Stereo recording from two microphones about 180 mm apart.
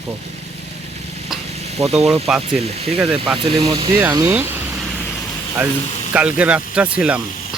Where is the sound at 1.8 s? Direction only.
35° right (ahead or behind).